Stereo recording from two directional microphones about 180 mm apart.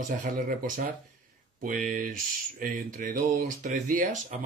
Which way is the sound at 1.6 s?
45° right (ahead or behind).